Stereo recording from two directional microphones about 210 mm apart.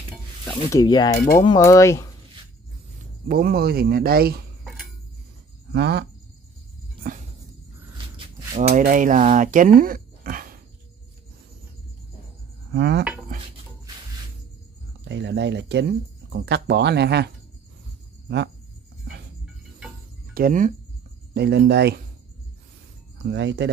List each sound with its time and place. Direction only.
0.5 s speech: 15° left (ahead or behind)
1.1 s cutlery: 45° left (ahead or behind)
1.4 s speech: 20° left (ahead or behind)
3.3 s speech: 45° right (ahead or behind)
5.7 s speech: 50° right (ahead or behind)
7.0 s music: 40° right (ahead or behind)
8.5 s speech: 35° right (ahead or behind)
12.7 s speech: 50° right (ahead or behind)
15.0 s speech: 55° right (ahead or behind)
20.3 s speech: 40° right (ahead or behind)
21.4 s speech: 50° right (ahead or behind)
23.2 s speech: 55° right (ahead or behind)